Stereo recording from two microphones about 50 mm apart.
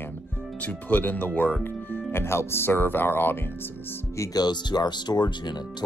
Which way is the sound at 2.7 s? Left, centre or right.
Left.